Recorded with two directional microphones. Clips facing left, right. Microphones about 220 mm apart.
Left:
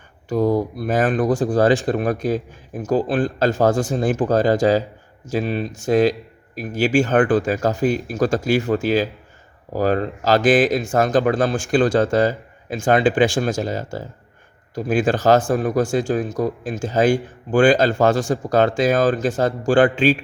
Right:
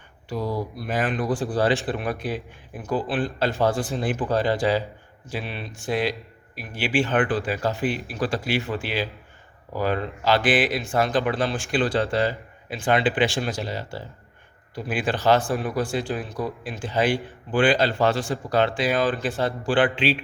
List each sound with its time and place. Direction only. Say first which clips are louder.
0.3 s speech: left 9 dB; 50° left (ahead or behind)